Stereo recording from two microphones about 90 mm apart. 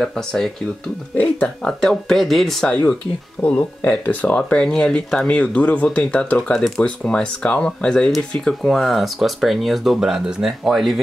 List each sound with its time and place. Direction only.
0.0 s speech: 5° left (ahead or behind)
1.7 s speech: 5° left (ahead or behind)
2.7 s speech: 15° left (ahead or behind); by 11.0 s centre (ahead or behind)